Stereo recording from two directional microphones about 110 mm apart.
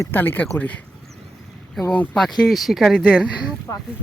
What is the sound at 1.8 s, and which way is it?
Speech, centre (ahead or behind).